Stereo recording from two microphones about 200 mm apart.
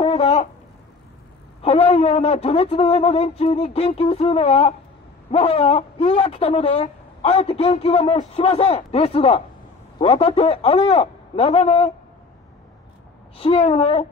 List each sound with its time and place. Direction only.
0.0 s a sound: 30° left (ahead or behind)
1.6 s a man's voice: 30° left (ahead or behind)
13.4 s a man's voice: 30° left (ahead or behind)